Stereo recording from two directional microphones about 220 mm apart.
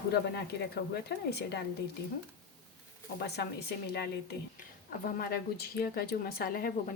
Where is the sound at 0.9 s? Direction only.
50° left (ahead or behind).